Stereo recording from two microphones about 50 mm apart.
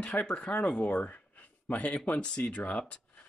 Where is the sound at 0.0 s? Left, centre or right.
Left.